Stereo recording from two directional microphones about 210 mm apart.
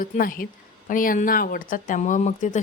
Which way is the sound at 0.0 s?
40° left (ahead or behind).